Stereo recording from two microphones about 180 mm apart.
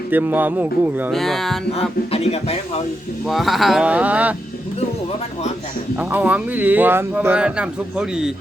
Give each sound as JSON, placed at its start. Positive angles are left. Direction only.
{"t": 0.1, "sound": "speech", "side_deg": -10}
{"t": 1.1, "sound": "speech", "side_deg": 0}
{"t": 1.7, "sound": "speech", "side_deg": 35}
{"t": 3.2, "sound": "speech", "side_deg": 0}
{"t": 6.0, "sound": "speech", "side_deg": -10}